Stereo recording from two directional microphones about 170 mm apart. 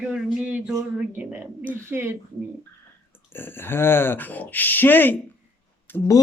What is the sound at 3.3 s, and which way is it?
Speech, 15° left (ahead or behind).